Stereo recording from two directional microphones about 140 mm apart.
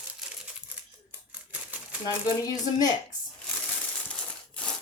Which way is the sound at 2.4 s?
25° left (ahead or behind).